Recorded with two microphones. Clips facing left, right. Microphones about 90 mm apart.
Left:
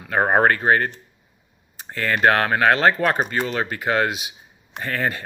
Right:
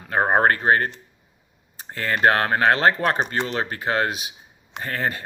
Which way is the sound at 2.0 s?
30° right (ahead or behind).